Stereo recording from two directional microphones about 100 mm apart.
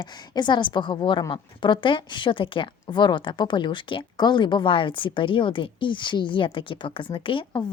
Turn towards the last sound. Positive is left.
turn(degrees=55)  # may be behind; listen again after turning